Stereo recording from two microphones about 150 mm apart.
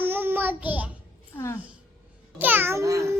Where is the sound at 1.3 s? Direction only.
15° left (ahead or behind).